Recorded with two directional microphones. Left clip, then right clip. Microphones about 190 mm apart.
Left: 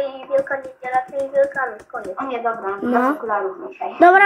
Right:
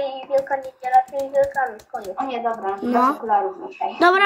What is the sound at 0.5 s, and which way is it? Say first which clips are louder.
A man's voice: right 3 dB; 30° right (ahead or behind).